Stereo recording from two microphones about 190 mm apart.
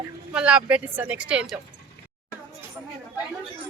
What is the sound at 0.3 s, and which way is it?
Speech, 5° right (ahead or behind).